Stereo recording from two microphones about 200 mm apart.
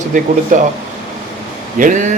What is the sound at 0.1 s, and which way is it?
Speech, 40° right (ahead or behind).